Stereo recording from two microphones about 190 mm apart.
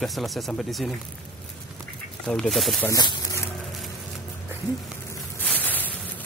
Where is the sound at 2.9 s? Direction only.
20° left (ahead or behind).